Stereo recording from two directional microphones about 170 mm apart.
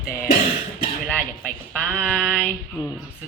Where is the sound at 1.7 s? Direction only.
5° left (ahead or behind).